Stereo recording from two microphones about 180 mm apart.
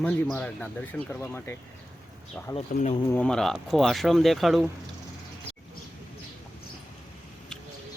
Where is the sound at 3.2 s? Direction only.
5° left (ahead or behind).